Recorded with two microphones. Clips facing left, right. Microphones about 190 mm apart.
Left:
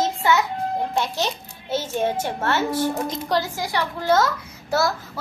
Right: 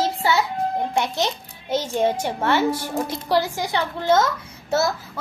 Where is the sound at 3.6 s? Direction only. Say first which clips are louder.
Right 1 dB; 25° right (ahead or behind).